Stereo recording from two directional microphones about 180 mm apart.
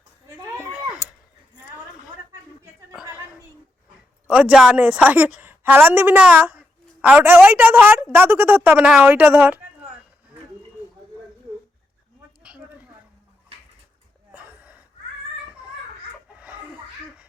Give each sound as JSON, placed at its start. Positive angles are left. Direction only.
{"t": 0.3, "sound": "cat", "side_deg": -15}
{"t": 4.3, "sound": "a woman's voice", "side_deg": -5}
{"t": 12.4, "sound": "a sound", "side_deg": -5}